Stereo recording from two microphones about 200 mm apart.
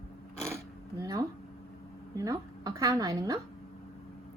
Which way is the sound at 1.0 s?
15° right (ahead or behind).